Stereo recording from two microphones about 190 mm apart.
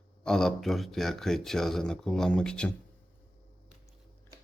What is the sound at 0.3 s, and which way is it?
Speech, 5° left (ahead or behind).